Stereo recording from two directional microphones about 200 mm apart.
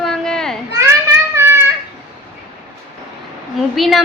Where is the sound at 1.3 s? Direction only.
10° right (ahead or behind).